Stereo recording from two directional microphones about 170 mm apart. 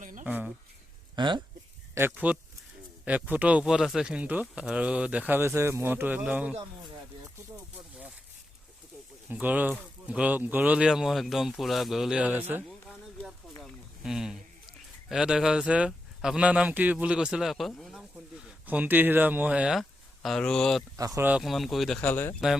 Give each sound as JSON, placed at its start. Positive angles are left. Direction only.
{"t": 0.0, "sound": "a sound", "side_deg": -50}
{"t": 0.3, "sound": "speech", "side_deg": -10}
{"t": 1.1, "sound": "speech", "side_deg": -25}
{"t": 2.0, "sound": "speech", "side_deg": -10}
{"t": 9.3, "sound": "speech", "side_deg": -10}
{"t": 12.6, "sound": "a sound", "side_deg": 0}
{"t": 13.6, "sound": "a man's voice", "side_deg": 0}
{"t": 20.9, "sound": "speech", "side_deg": -20}
{"t": 21.2, "sound": "speech", "side_deg": -5}